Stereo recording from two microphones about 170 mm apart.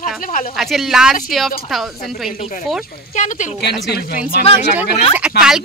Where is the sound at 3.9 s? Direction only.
60° left (ahead or behind).